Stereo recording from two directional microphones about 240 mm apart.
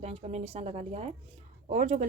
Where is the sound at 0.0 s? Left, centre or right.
Right.